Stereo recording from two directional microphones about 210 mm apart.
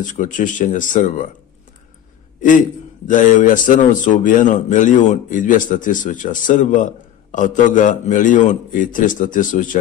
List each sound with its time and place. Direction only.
0.0 s a man's voice: 40° left (ahead or behind)
3.1 s a man's voice: 40° left (ahead or behind)